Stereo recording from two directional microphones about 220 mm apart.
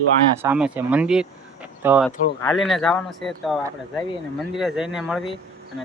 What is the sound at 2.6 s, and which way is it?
A man's voice, centre (ahead or behind).